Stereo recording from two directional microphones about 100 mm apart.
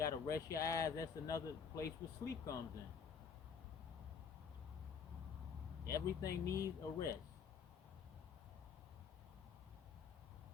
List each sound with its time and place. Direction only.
0.0 s speech: 35° left (ahead or behind)
5.8 s speech: 30° left (ahead or behind)